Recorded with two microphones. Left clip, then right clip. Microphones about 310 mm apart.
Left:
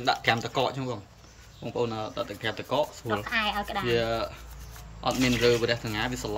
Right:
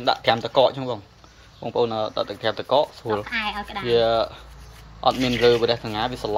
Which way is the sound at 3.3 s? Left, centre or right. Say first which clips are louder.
Right 1 dB; left.